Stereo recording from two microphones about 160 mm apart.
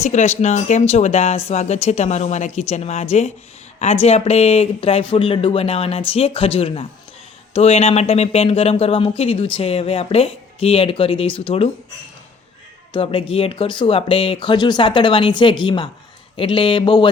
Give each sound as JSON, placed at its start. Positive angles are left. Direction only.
{"t": 0.0, "sound": "speech", "side_deg": 45}
{"t": 12.9, "sound": "speech", "side_deg": 35}